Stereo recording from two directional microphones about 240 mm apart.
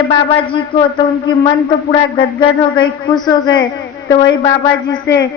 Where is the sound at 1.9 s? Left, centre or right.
Centre.